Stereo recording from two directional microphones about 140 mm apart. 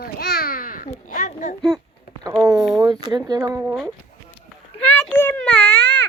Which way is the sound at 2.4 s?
25° right (ahead or behind).